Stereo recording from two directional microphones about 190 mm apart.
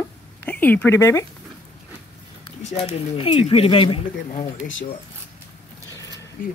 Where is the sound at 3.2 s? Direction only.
30° left (ahead or behind).